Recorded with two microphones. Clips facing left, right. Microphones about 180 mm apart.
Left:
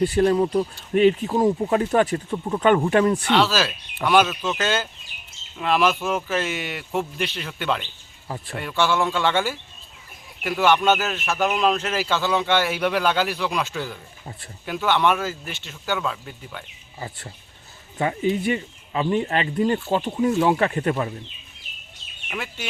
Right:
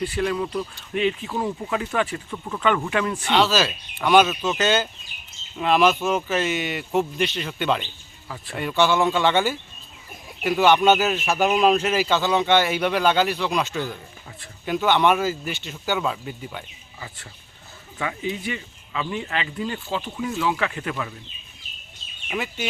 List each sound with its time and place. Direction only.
0.0 s speech: 35° left (ahead or behind)
3.2 s speech: centre (ahead or behind)
10.6 s speech: 5° right (ahead or behind)
11.9 s speech: centre (ahead or behind)
17.9 s speech: 35° left (ahead or behind)
22.3 s speech: 5° right (ahead or behind)